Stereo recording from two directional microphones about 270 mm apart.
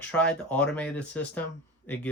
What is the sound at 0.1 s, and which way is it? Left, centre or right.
Speech, centre.